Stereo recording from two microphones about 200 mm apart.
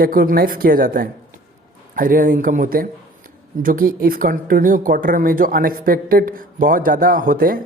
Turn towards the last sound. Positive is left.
turn(degrees=-45)  # may be behind; listen again after turning